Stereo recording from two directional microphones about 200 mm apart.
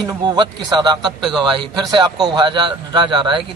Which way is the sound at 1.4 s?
25° right (ahead or behind).